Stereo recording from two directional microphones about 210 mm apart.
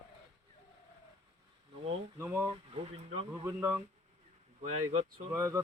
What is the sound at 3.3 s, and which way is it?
Speech, 10° right (ahead or behind).